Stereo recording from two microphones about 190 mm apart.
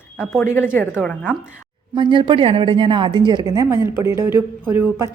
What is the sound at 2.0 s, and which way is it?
A woman's voice, 25° right (ahead or behind).